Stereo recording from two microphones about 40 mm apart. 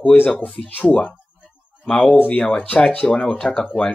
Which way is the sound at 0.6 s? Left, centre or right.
Left.